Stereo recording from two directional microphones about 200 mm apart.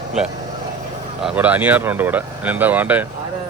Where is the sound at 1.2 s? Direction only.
10° right (ahead or behind).